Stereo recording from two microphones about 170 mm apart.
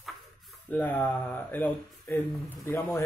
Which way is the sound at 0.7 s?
10° left (ahead or behind).